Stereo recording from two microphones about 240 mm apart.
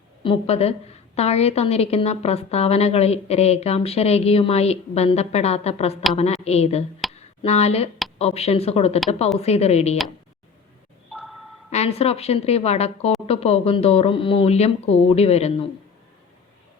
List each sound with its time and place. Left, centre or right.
0.2 s a woman's voice: left
11.1 s a sound: centre
11.7 s a woman's voice: left